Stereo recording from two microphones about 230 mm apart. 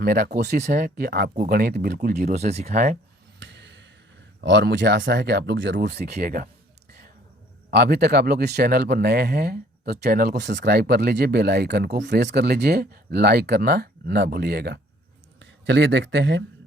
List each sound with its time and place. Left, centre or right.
0.0 s speech: right
0.5 s speech: right
3.4 s a sound: right
4.4 s speech: right
7.7 s speech: right